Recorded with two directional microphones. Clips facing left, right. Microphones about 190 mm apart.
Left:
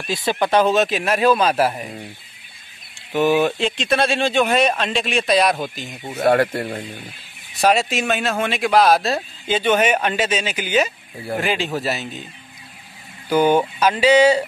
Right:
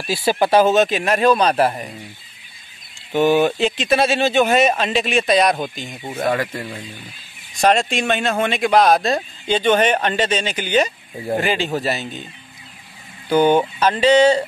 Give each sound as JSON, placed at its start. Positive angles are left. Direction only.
{"t": 0.1, "sound": "speech", "side_deg": -10}
{"t": 3.1, "sound": "speech", "side_deg": 0}
{"t": 6.2, "sound": "speech", "side_deg": 60}
{"t": 7.6, "sound": "speech", "side_deg": 5}
{"t": 13.3, "sound": "speech", "side_deg": 10}